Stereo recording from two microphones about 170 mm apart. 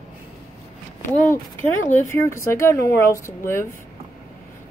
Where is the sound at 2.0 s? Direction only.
15° left (ahead or behind).